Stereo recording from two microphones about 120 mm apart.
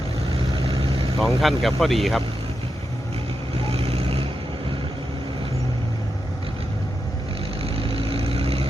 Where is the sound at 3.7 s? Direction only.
55° right (ahead or behind).